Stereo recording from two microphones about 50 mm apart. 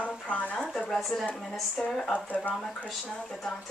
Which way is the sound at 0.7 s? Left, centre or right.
Centre.